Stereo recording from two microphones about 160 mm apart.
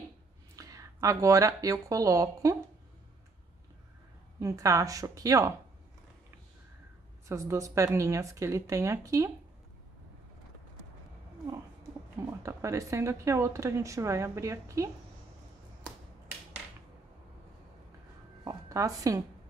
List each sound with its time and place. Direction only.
0.6 s speech: 20° right (ahead or behind)
4.4 s speech: 20° right (ahead or behind)
7.2 s speech: 20° right (ahead or behind)
12.4 s speech: 20° right (ahead or behind)
18.4 s a sound: 20° right (ahead or behind)